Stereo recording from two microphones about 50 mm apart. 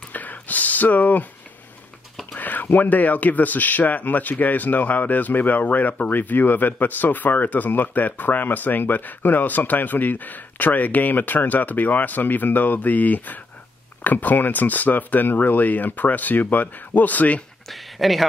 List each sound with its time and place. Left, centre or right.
0.1 s a sound: left
2.3 s speech: left
17.6 s speech: centre